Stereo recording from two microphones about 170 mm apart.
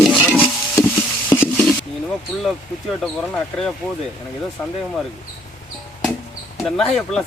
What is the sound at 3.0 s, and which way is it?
Speech, 5° left (ahead or behind).